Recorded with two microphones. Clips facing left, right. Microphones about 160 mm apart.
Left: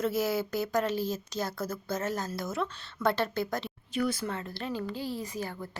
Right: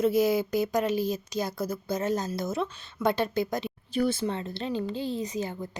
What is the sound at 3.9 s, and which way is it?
A woman's voice, 30° right (ahead or behind).